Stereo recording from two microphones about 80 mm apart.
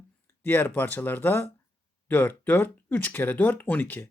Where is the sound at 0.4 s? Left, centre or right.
Left.